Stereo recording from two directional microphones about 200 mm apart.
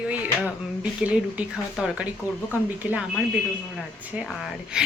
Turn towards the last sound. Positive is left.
turn(degrees=-5)  # may be behind; listen again after turning